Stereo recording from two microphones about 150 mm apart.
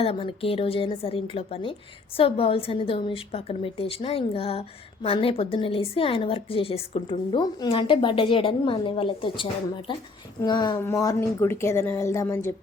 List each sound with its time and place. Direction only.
0.0 s a woman's voice: 40° left (ahead or behind); by 12.5 s 20° left (ahead or behind)